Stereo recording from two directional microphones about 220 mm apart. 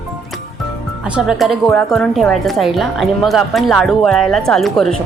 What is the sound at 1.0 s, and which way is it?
Speech, 5° right (ahead or behind).